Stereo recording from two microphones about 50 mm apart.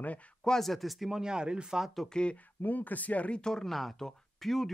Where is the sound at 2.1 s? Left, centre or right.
Centre.